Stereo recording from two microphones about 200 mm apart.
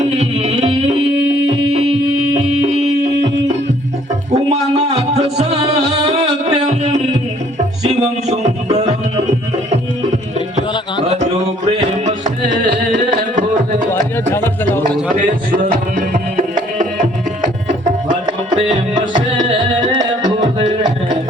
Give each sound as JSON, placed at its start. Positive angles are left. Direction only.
{"t": 0.2, "sound": "music", "side_deg": -35}
{"t": 4.5, "sound": "music", "side_deg": -30}
{"t": 6.5, "sound": "a sound", "side_deg": -35}
{"t": 7.9, "sound": "music", "side_deg": -35}
{"t": 14.3, "sound": "music", "side_deg": 10}
{"t": 15.1, "sound": "tabla", "side_deg": -45}
{"t": 19.8, "sound": "music", "side_deg": -20}